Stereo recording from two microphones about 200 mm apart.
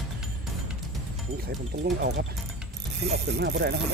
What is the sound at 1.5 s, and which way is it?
Speech, 55° right (ahead or behind).